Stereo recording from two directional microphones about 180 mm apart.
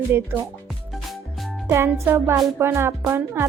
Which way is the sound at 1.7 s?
15° right (ahead or behind).